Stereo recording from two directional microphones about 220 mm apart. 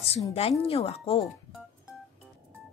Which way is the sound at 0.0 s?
25° left (ahead or behind).